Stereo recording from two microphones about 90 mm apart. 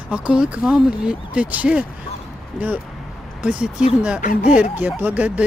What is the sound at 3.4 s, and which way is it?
Speech, 10° right (ahead or behind).